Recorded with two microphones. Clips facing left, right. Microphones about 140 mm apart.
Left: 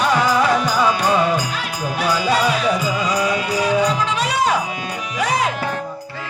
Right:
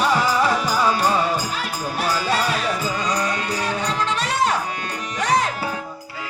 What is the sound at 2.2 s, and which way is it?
Music, centre (ahead or behind).